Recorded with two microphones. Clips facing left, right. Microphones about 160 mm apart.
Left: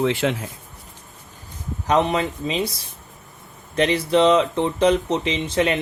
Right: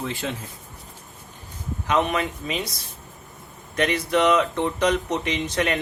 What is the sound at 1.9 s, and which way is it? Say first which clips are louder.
Speech: left 3 dB; 30° left (ahead or behind).